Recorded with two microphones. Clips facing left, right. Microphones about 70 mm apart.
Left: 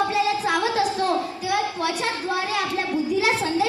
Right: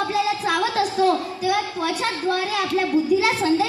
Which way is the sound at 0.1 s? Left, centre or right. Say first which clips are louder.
Even; centre.